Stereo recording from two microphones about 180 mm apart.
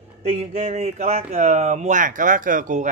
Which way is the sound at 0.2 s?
35° right (ahead or behind).